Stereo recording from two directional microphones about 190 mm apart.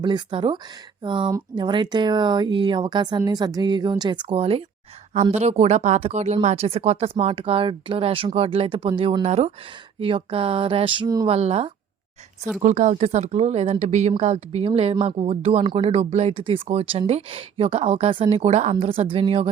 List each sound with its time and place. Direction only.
0.0 s speech: 25° right (ahead or behind)
11.3 s speech: 35° right (ahead or behind)